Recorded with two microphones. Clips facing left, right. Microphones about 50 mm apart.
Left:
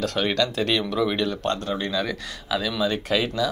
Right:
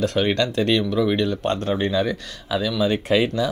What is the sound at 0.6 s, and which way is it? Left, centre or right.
Speech, centre.